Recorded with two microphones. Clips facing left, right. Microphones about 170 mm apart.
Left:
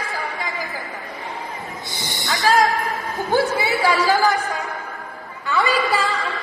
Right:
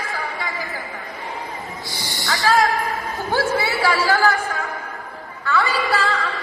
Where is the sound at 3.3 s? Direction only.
20° left (ahead or behind).